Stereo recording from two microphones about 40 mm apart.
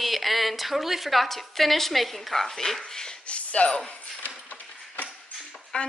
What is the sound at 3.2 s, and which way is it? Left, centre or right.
Speech, left.